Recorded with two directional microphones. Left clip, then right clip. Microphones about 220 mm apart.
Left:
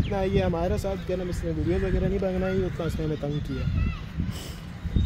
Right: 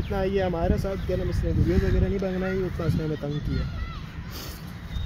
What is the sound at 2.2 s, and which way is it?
Speech, 5° left (ahead or behind).